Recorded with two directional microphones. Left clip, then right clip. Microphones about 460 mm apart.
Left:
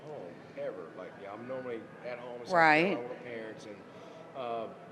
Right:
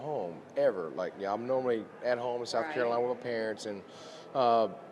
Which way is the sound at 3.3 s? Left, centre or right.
Right.